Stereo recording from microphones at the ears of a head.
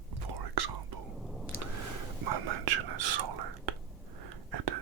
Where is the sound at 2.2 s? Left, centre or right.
Right.